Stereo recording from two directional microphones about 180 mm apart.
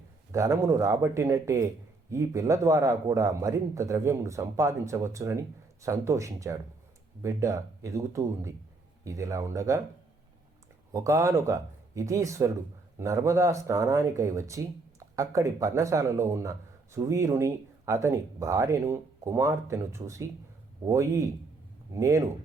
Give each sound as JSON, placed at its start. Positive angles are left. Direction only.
{"t": 0.3, "sound": "speech", "side_deg": -15}
{"t": 10.9, "sound": "speech", "side_deg": -15}